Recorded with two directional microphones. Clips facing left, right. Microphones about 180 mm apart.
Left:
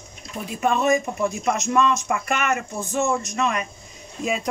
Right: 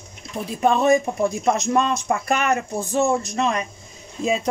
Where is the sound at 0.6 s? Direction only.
35° right (ahead or behind).